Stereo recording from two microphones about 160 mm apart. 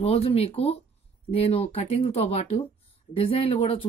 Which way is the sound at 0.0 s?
40° left (ahead or behind).